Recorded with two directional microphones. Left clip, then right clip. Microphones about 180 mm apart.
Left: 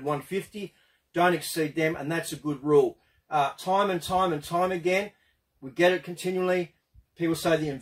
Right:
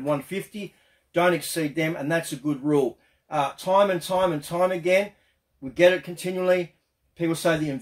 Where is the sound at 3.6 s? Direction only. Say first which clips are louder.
Right 5 dB; 15° right (ahead or behind).